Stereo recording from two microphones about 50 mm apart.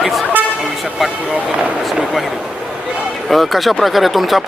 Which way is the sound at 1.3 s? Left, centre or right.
Right.